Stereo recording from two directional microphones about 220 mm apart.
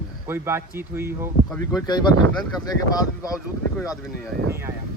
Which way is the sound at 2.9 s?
15° left (ahead or behind).